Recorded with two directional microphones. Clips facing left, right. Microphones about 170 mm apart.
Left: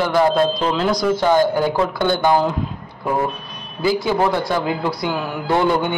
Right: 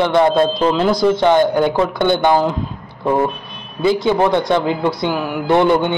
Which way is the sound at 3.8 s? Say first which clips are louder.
Right 3 dB; 20° right (ahead or behind).